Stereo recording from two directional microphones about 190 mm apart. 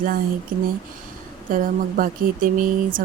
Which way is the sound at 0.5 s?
50° right (ahead or behind).